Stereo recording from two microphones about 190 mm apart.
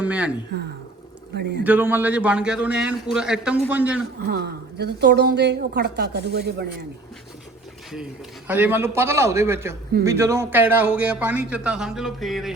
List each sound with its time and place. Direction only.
0.0 s speech: 5° right (ahead or behind)
1.4 s a woman's voice: 65° right (ahead or behind)
1.6 s a man's voice: 10° right (ahead or behind)
4.2 s a woman's voice: 55° right (ahead or behind)
8.4 s a man's voice: 10° right (ahead or behind)